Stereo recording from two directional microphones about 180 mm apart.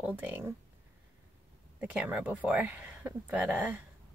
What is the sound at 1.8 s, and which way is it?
Speech, 5° right (ahead or behind).